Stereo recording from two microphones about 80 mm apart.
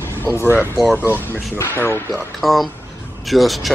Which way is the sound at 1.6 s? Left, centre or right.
Left.